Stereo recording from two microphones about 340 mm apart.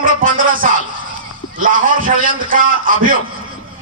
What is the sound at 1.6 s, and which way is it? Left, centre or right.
A man's voice, right.